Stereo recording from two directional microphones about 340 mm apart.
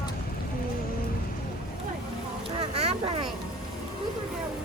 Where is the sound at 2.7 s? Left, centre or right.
Centre.